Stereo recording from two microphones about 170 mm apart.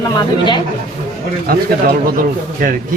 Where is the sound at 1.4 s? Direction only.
60° right (ahead or behind).